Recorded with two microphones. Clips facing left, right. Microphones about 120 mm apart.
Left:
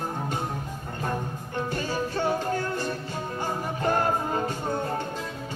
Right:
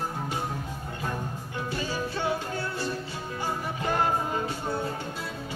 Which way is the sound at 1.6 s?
45° left (ahead or behind).